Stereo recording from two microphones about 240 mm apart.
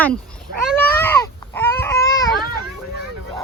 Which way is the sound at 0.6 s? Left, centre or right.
Centre.